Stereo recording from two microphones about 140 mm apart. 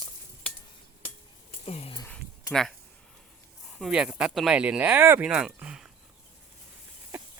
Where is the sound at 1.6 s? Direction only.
45° left (ahead or behind).